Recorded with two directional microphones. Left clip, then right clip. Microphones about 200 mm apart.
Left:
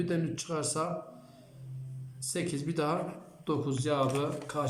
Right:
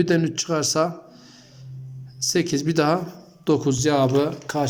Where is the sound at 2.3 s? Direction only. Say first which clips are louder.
Right 12 dB; 50° right (ahead or behind).